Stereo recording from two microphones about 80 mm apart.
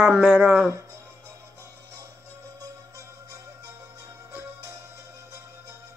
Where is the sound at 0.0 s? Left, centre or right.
Centre.